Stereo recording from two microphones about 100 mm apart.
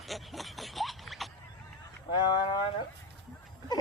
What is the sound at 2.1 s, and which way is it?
Speech, 50° left (ahead or behind).